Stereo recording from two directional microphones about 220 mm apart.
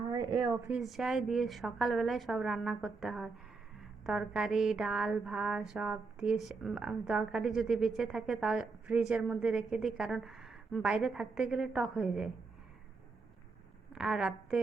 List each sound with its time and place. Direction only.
0.1 s a sound: 15° right (ahead or behind)
0.5 s mantra: centre (ahead or behind)
13.9 s a woman's voice: 5° right (ahead or behind)